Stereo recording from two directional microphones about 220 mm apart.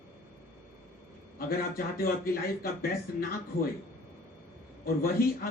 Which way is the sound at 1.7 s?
40° left (ahead or behind).